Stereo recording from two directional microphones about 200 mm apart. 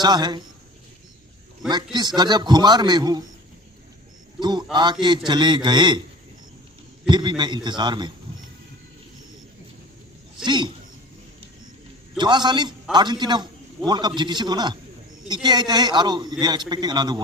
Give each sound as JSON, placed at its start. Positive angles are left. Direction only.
{"t": 0.0, "sound": "a man's voice", "side_deg": -20}
{"t": 1.7, "sound": "a man's voice", "side_deg": -20}
{"t": 4.4, "sound": "a man's voice", "side_deg": -20}
{"t": 7.1, "sound": "a man's voice", "side_deg": -20}
{"t": 10.4, "sound": "a man's voice", "side_deg": -20}
{"t": 12.1, "sound": "a man's voice", "side_deg": -20}